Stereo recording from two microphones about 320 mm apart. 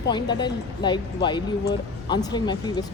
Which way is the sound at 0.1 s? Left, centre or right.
Centre.